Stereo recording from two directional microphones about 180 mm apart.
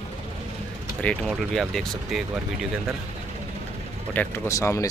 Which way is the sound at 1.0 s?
5° left (ahead or behind).